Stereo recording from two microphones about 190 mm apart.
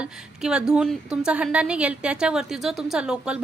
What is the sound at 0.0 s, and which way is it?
A woman's voice, 5° right (ahead or behind).